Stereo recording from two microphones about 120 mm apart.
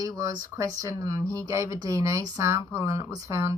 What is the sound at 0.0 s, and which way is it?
Speech, 30° right (ahead or behind).